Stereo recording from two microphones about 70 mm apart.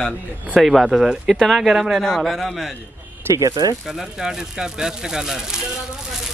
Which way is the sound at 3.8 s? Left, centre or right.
Centre.